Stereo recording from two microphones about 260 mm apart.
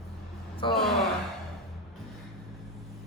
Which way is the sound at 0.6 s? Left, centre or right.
Centre.